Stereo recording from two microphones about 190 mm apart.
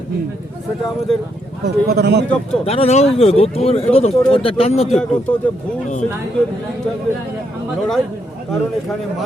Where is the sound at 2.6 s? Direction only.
30° left (ahead or behind).